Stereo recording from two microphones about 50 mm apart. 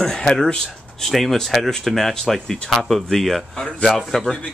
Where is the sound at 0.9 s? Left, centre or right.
Centre.